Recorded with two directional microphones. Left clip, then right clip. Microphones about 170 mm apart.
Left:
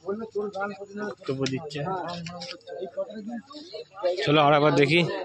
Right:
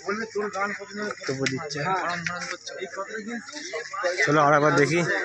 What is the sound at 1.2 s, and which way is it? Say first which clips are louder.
Speech: right 1 dB; 10° left (ahead or behind).